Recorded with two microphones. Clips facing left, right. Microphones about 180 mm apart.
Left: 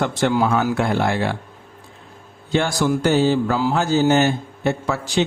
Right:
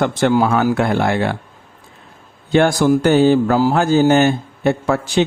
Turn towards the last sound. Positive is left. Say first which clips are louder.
# right 5 dB
turn(degrees=-55)  # may be behind; listen again after turning